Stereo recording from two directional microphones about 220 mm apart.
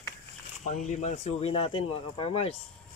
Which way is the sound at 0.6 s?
30° left (ahead or behind).